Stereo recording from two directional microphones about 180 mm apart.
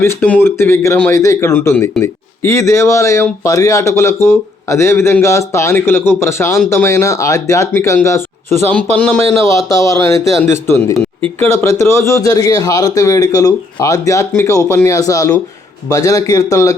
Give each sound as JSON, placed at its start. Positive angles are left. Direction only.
{"t": 0.0, "sound": "a man's voice", "side_deg": 10}